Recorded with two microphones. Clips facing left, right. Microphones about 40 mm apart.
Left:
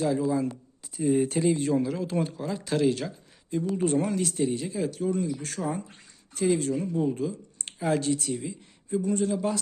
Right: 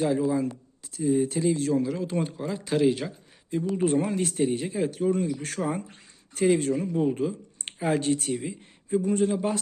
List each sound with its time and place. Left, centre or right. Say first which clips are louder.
0.0 s speech: right 1 dB; right
1.1 s speech: even; left
1.5 s speech: right 1 dB; centre
1.8 s speech: even; centre; by 4.3 s right
4.3 s speech: right 2 dB; right
8.0 s speech: right 2 dB; right